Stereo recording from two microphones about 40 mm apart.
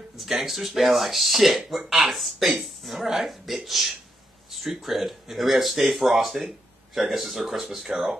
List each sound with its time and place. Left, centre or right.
0.2 s a woman's voice: centre